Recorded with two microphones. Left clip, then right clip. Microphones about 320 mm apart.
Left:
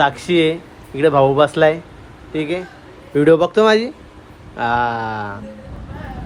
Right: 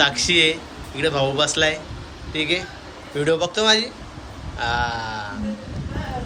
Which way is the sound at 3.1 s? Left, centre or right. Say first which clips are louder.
Left 8 dB; centre.